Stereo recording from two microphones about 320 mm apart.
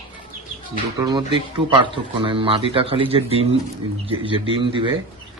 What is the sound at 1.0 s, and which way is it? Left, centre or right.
Speech, centre.